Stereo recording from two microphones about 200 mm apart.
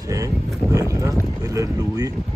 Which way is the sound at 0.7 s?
15° right (ahead or behind).